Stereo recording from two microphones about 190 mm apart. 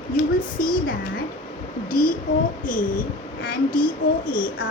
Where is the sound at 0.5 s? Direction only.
50° left (ahead or behind).